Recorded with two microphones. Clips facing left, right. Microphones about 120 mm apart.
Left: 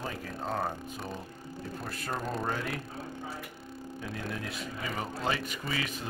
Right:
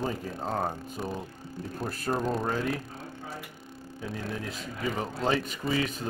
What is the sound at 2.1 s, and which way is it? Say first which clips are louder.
Speech: right 4 dB; centre (ahead or behind).